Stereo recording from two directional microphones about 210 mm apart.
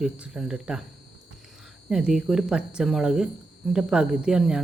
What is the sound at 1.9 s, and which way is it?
Speech, centre (ahead or behind).